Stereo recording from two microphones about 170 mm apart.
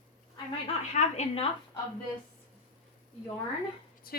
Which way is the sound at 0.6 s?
40° left (ahead or behind).